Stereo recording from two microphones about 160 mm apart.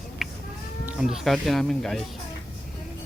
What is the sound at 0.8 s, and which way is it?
Speech, 5° right (ahead or behind).